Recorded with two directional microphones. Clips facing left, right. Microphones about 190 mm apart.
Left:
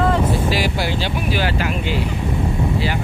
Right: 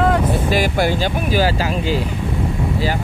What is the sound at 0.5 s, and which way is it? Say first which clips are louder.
Speech: right 4 dB; 50° right (ahead or behind).